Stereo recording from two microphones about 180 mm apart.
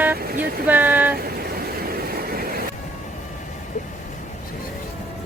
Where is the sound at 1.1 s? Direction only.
60° right (ahead or behind).